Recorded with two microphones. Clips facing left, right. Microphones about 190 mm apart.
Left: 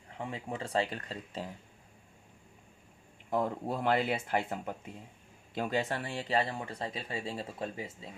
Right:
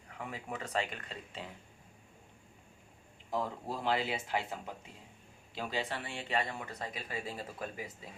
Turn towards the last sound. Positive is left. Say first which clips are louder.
# left 3 dB
turn(degrees=25)  # may be behind; listen again after turning